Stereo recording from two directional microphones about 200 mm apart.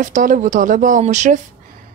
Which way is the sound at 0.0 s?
40° right (ahead or behind).